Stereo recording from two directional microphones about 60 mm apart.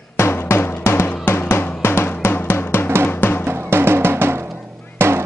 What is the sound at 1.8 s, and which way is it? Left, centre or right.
Drum, left.